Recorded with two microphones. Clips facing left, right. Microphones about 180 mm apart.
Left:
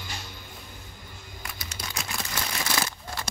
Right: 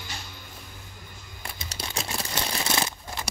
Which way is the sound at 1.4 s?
30° right (ahead or behind).